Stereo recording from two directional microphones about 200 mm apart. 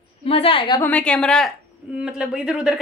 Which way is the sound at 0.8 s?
5° left (ahead or behind).